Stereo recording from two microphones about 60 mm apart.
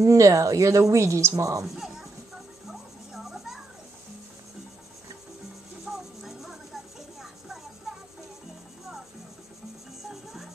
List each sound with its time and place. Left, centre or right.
0.0 s speech: right
2.7 s a sound: centre
5.9 s music: centre
10.0 s music: centre